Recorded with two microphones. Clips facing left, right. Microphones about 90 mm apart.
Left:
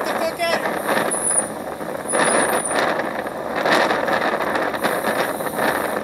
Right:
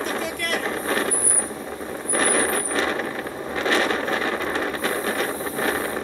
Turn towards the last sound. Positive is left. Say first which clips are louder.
# left 4 dB
turn(degrees=15)  # may be behind; listen again after turning